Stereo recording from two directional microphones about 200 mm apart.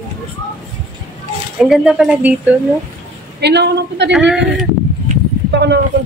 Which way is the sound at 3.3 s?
55° right (ahead or behind).